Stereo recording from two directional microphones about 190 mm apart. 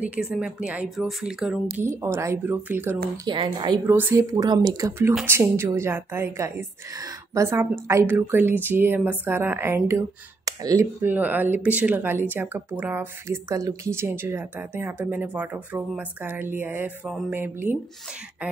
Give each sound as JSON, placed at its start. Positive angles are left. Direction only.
{"t": 0.0, "sound": "a woman's voice", "side_deg": -5}
{"t": 2.0, "sound": "speech", "side_deg": -15}
{"t": 3.3, "sound": "a woman's voice", "side_deg": -25}
{"t": 3.8, "sound": "speech", "side_deg": -10}